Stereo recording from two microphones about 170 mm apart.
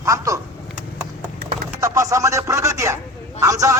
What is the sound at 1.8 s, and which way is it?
Speech, 20° right (ahead or behind).